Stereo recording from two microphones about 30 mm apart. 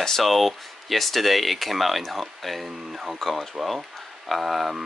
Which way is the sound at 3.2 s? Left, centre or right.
Centre.